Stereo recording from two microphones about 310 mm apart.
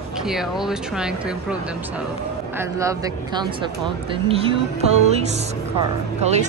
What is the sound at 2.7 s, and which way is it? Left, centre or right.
Speech, centre.